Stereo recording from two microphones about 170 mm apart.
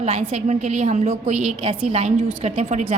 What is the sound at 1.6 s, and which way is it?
A woman's voice, 35° right (ahead or behind).